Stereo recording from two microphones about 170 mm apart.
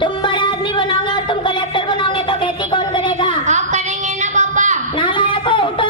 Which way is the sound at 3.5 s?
45° right (ahead or behind).